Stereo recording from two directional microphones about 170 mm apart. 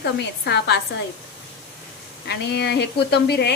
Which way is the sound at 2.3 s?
75° left (ahead or behind).